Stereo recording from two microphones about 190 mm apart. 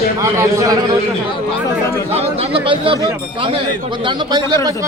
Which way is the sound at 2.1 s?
30° right (ahead or behind).